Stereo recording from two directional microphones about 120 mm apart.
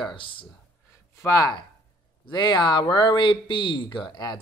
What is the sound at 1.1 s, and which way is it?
Speech, 25° left (ahead or behind).